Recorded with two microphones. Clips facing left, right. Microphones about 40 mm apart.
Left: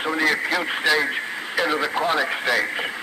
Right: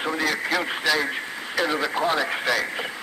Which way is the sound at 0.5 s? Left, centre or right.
Centre.